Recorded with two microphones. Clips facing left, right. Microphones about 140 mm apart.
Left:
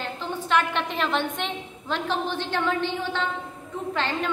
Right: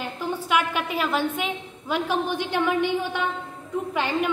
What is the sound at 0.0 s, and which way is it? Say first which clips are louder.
A woman's voice: right 2 dB; 10° right (ahead or behind).